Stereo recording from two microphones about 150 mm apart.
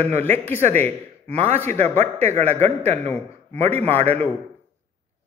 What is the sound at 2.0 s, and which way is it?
Speech, 45° right (ahead or behind).